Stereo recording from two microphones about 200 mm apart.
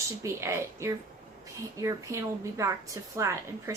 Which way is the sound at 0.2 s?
15° right (ahead or behind).